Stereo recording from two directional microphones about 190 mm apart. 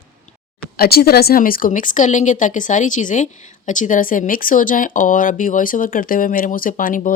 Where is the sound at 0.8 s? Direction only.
55° left (ahead or behind).